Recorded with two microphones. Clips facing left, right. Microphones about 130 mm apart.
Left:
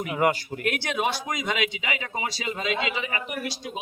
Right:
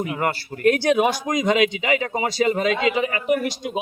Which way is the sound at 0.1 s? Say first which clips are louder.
Left 1 dB; 10° left (ahead or behind).